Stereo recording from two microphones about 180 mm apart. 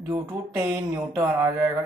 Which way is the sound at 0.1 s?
15° right (ahead or behind).